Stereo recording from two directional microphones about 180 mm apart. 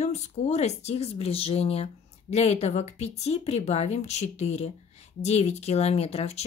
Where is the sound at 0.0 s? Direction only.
40° left (ahead or behind).